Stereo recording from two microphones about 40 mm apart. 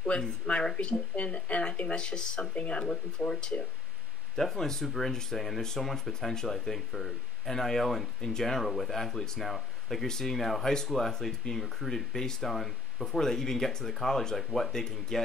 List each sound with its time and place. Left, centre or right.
0.0 s speech: left
2.5 s speech: left
3.2 s speech: left
4.4 s speech: centre
8.6 s speech: centre